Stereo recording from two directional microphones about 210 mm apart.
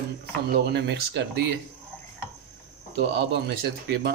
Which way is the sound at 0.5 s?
55° right (ahead or behind).